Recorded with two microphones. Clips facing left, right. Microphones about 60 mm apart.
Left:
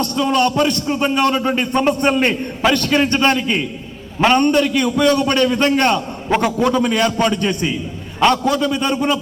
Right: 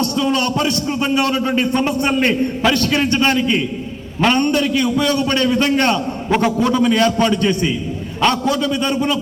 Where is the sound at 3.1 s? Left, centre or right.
Left.